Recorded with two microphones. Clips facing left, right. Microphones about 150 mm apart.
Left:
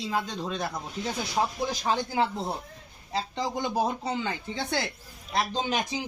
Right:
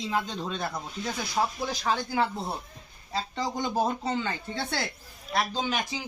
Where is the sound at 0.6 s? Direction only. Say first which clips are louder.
Left 1 dB; 20° left (ahead or behind).